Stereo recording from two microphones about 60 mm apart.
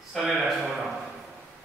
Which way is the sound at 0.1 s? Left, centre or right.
Centre.